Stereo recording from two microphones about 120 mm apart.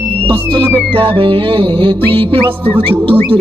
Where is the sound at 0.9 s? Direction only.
50° right (ahead or behind).